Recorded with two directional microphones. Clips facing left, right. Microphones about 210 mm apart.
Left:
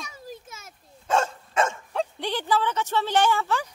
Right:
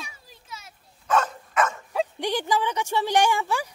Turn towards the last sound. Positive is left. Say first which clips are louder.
# even
turn(degrees=-15)  # may be behind; listen again after turning